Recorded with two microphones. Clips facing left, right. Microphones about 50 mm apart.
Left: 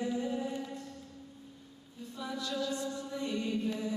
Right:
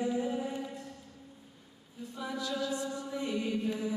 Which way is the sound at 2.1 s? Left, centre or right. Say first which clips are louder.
Right 1 dB; centre.